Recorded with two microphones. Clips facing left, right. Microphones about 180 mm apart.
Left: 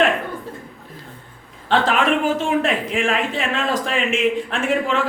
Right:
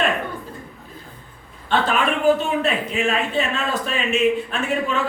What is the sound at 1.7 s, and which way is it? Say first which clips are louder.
A man's voice: left 3 dB; 90° left.